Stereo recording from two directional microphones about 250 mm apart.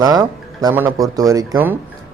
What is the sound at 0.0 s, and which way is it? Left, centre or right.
A man's voice, centre.